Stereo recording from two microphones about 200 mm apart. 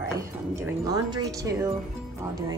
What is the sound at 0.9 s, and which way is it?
Music, 20° right (ahead or behind).